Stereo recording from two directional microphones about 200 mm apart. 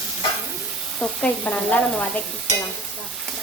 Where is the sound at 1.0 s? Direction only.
10° left (ahead or behind).